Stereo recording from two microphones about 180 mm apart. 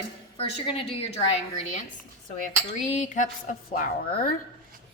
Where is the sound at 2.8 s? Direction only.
45° left (ahead or behind).